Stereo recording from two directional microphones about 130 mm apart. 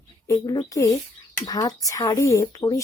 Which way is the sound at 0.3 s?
30° left (ahead or behind).